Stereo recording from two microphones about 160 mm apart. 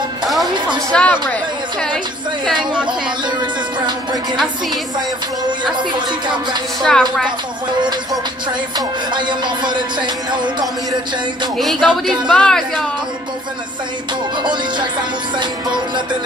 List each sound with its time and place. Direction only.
0.9 s a woman's voice: 10° left (ahead or behind)
3.8 s music: 30° right (ahead or behind)
5.8 s music: 30° right (ahead or behind)
6.8 s a woman's voice: 5° left (ahead or behind)
8.7 s music: 30° right (ahead or behind)
11.5 s a woman's voice: centre (ahead or behind)
14.4 s music: 30° right (ahead or behind)